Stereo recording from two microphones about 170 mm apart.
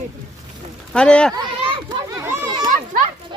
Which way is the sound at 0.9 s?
5° left (ahead or behind).